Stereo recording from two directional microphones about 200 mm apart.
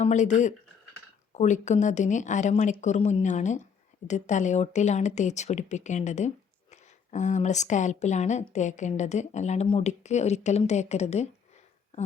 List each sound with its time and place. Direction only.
0.0 s speech: 35° left (ahead or behind)